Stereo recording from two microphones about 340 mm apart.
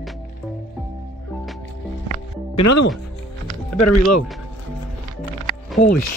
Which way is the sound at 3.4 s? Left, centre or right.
Centre.